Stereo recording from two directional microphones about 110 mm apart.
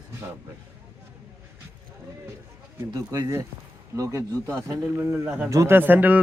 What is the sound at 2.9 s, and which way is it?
A man's voice, 35° right (ahead or behind).